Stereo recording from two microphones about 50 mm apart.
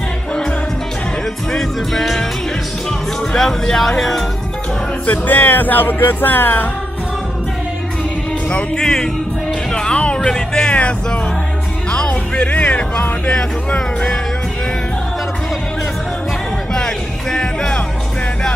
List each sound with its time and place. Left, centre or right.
1.5 s music: centre
3.3 s speech: centre
5.0 s music: left
8.5 s speech: centre
9.7 s music: centre
10.3 s speech: centre
10.7 s music: left
16.7 s music: centre